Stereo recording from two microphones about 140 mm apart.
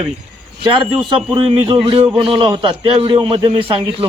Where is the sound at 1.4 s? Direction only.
40° right (ahead or behind).